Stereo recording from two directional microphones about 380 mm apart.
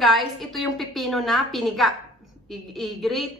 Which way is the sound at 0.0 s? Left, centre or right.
Centre.